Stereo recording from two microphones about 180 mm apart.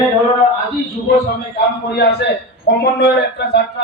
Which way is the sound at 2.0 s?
70° left (ahead or behind).